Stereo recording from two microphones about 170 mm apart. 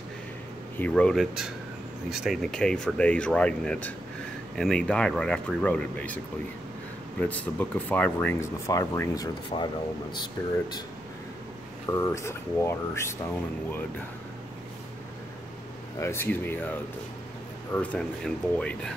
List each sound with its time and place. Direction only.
0.7 s speech: 5° left (ahead or behind); by 10.8 s 25° left (ahead or behind)
11.9 s speech: 20° left (ahead or behind)
16.0 s speech: 15° left (ahead or behind)
17.7 s speech: 5° left (ahead or behind)